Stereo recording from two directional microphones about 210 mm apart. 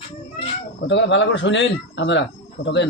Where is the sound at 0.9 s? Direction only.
60° left (ahead or behind).